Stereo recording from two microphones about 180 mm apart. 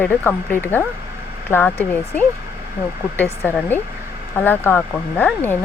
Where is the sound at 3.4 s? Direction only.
10° left (ahead or behind).